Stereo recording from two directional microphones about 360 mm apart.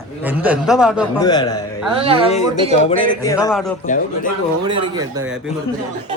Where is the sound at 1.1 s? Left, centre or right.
Centre.